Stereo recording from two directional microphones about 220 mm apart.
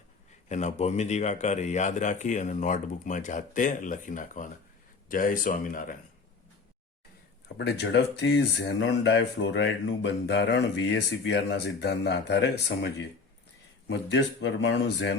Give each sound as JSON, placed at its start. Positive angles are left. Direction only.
{"t": 0.4, "sound": "speech", "side_deg": 30}
{"t": 7.4, "sound": "speech", "side_deg": 50}